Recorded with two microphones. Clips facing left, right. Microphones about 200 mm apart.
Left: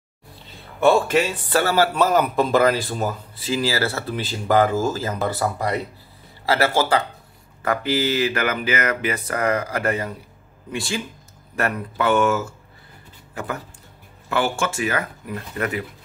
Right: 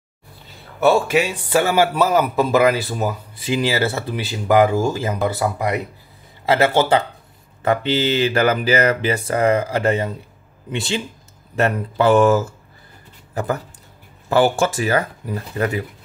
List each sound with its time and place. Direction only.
0.7 s speech: 10° right (ahead or behind)
6.4 s speech: 20° right (ahead or behind)